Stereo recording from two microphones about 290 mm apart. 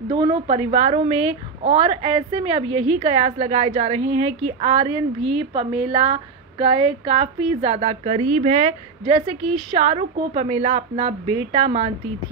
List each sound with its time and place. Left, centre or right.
0.1 s a woman's voice: centre
5.2 s a woman's voice: right
5.5 s a woman's voice: centre